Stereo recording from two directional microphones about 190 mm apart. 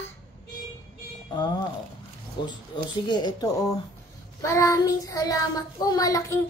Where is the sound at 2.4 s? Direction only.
25° left (ahead or behind).